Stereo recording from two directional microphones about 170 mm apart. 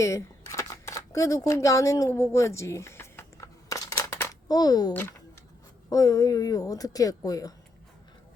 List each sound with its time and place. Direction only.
0.0 s single-lens reflex camera: 15° left (ahead or behind)
5.9 s a woman's voice: 20° left (ahead or behind)